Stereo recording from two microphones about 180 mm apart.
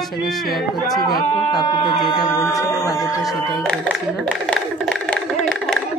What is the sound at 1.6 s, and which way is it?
Speech, 25° left (ahead or behind).